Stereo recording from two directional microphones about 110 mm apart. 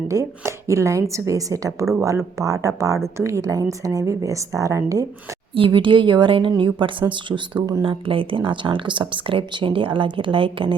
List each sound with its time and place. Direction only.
0.1 s a woman's voice: 30° right (ahead or behind)
5.5 s speech: 50° right (ahead or behind)